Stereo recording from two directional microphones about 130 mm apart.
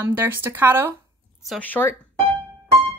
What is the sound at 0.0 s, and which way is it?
Speech, 15° right (ahead or behind).